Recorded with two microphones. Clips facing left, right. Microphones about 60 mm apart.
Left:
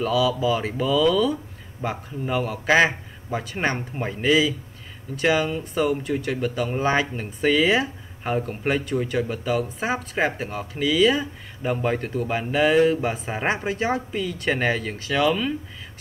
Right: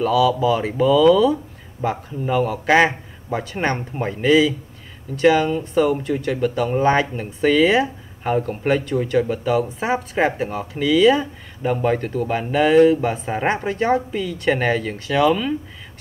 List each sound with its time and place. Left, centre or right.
0.0 s speech: centre